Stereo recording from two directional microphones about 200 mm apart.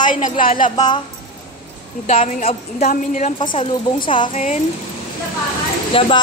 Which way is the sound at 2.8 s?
40° left (ahead or behind).